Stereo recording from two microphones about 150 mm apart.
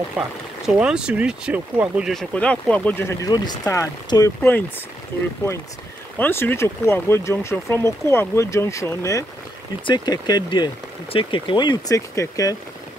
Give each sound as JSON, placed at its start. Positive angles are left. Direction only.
{"t": 0.7, "sound": "speech", "side_deg": -5}
{"t": 2.3, "sound": "speech", "side_deg": 10}
{"t": 3.3, "sound": "speech", "side_deg": 25}
{"t": 6.1, "sound": "speech", "side_deg": 15}